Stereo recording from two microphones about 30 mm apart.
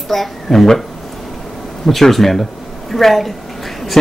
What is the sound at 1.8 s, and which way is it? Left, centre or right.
Speech, centre.